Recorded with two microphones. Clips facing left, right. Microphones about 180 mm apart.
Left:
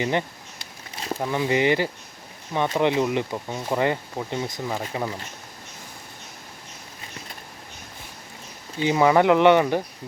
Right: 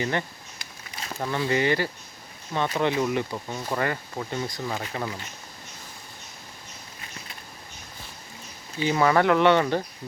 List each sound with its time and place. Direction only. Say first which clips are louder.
0.0 s a sound: left 3 dB; 20° left (ahead or behind)
1.2 s speech: left 2 dB; 15° left (ahead or behind)
8.8 s speech: left 3 dB; 15° left (ahead or behind)